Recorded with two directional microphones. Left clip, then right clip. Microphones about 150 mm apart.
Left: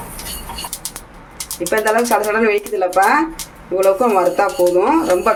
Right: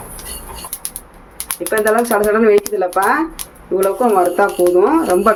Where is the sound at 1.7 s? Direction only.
35° right (ahead or behind).